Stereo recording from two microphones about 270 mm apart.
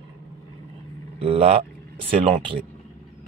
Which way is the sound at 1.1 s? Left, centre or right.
Right.